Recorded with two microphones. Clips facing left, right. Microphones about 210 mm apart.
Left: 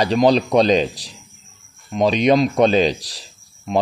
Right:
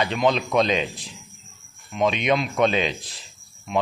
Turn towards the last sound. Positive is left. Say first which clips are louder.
# left 7 dB
turn(degrees=35)  # may be behind; listen again after turning